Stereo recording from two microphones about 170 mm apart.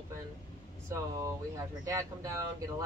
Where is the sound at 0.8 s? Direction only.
15° right (ahead or behind).